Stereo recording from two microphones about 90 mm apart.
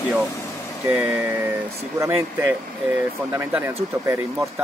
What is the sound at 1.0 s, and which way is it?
Speech, 20° right (ahead or behind).